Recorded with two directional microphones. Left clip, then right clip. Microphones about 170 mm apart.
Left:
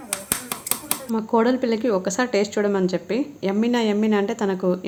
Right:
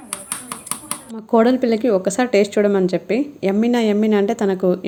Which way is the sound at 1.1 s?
15° right (ahead or behind).